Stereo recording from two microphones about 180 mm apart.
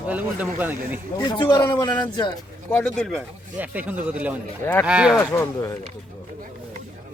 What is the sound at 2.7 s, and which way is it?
Speech, 5° left (ahead or behind).